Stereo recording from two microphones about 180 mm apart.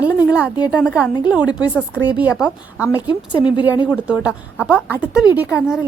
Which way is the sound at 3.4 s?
25° left (ahead or behind).